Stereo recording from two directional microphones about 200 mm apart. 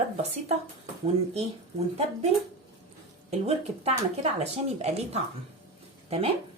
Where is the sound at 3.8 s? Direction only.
30° right (ahead or behind).